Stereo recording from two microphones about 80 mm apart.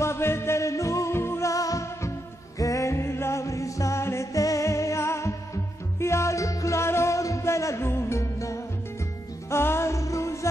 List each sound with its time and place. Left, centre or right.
0.0 s music: left